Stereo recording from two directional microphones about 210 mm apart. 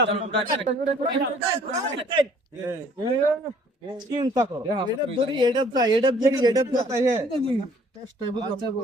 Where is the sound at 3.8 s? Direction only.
20° right (ahead or behind).